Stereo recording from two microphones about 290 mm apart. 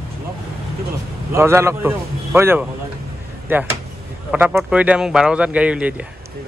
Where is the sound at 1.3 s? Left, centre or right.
Centre.